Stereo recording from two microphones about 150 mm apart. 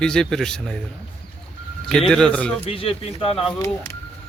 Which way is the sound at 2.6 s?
40° left (ahead or behind).